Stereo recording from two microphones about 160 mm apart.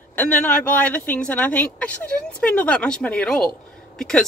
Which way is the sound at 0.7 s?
10° left (ahead or behind).